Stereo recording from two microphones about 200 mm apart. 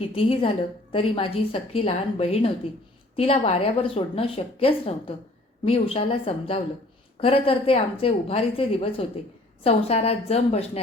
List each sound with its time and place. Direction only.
0.0 s a woman's voice: 30° left (ahead or behind)